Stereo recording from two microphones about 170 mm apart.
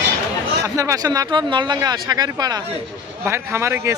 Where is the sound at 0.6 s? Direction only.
20° right (ahead or behind).